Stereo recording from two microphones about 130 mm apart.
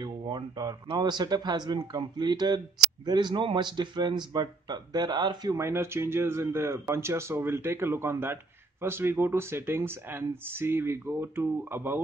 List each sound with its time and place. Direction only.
0.0 s speech: 35° right (ahead or behind); by 12.0 s 15° right (ahead or behind)